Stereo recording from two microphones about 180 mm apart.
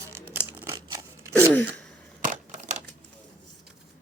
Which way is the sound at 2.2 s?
40° right (ahead or behind).